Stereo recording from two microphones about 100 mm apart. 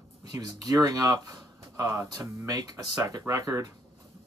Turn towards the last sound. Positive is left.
turn(degrees=-35)  # may be behind; listen again after turning